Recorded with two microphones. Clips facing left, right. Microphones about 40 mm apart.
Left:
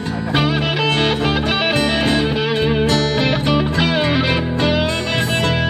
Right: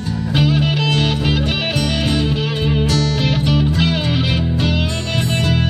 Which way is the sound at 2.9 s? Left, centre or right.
Left.